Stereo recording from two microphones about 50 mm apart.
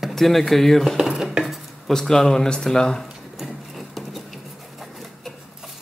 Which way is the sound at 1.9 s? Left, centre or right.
Centre.